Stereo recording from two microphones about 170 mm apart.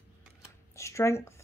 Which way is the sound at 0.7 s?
15° left (ahead or behind).